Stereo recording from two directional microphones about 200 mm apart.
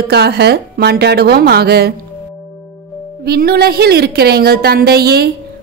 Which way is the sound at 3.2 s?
50° right (ahead or behind).